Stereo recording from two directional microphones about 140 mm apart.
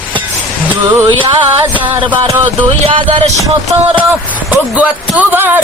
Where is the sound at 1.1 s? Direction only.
35° right (ahead or behind).